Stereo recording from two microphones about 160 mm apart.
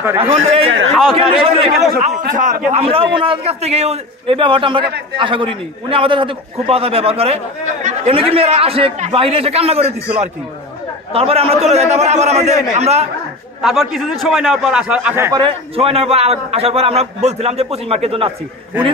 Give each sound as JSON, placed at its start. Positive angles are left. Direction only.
{"t": 0.2, "sound": "a man's voice", "side_deg": -35}
{"t": 2.0, "sound": "a man's voice", "side_deg": -50}
{"t": 2.7, "sound": "a man's voice", "side_deg": -35}
{"t": 11.1, "sound": "a man's voice", "side_deg": -40}
{"t": 13.6, "sound": "a man's voice", "side_deg": 0}
{"t": 15.3, "sound": "a man's voice", "side_deg": -35}